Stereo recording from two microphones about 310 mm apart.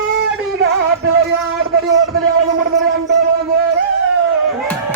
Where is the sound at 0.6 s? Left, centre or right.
Right.